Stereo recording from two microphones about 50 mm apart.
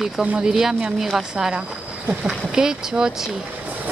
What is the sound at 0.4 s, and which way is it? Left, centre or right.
Speech, centre.